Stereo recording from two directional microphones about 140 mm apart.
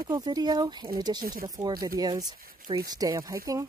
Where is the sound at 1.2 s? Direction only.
90° right.